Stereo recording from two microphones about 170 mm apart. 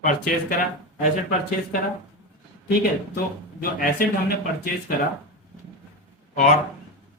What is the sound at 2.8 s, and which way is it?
Speech, 60° left (ahead or behind).